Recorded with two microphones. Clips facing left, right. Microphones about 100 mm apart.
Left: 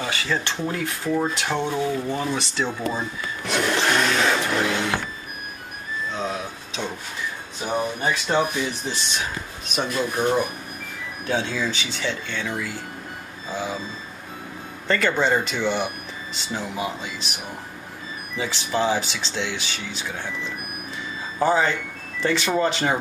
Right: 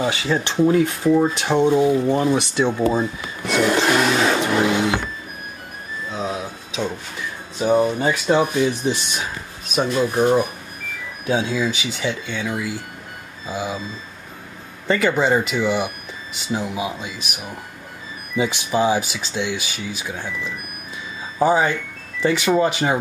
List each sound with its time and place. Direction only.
0.0 s speech: 20° right (ahead or behind)
3.4 s a sound: 5° right (ahead or behind)
4.5 s vehicle: 10° right (ahead or behind)
6.1 s vehicle: 5° right (ahead or behind)
7.6 s speech: 15° right (ahead or behind)
14.9 s speech: 10° right (ahead or behind)
21.4 s speech: 10° right (ahead or behind)